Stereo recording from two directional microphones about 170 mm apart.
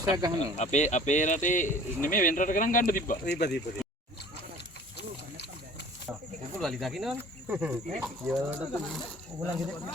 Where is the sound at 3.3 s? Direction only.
75° left (ahead or behind).